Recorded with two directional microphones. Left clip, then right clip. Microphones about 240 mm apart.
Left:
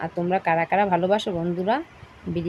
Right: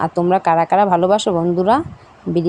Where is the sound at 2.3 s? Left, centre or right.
Right.